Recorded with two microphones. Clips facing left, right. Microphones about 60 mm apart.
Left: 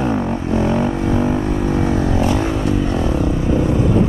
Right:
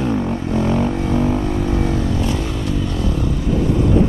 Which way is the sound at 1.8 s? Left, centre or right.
Left.